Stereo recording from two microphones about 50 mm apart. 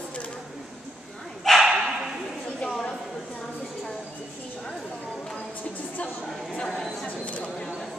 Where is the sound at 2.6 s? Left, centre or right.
Centre.